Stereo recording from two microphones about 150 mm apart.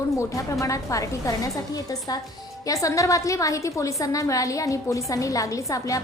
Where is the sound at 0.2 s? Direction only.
20° left (ahead or behind).